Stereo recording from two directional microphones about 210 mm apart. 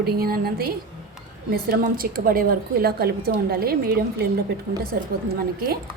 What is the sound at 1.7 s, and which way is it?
A woman's voice, 45° right (ahead or behind).